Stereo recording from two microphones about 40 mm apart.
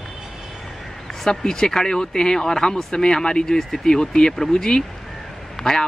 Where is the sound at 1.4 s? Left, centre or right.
Centre.